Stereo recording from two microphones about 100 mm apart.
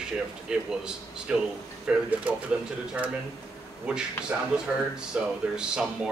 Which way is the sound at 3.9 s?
10° right (ahead or behind).